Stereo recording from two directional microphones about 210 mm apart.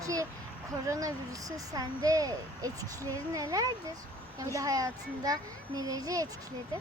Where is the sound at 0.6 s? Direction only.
15° right (ahead or behind).